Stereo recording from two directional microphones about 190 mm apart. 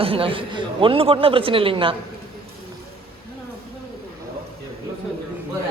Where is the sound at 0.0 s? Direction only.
30° right (ahead or behind).